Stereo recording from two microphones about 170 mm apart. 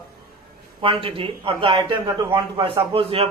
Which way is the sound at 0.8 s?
35° right (ahead or behind).